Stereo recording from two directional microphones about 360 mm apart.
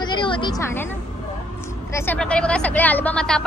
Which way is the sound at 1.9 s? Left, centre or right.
Centre.